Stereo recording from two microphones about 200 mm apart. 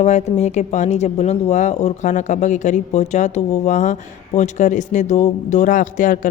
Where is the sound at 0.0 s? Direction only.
35° left (ahead or behind).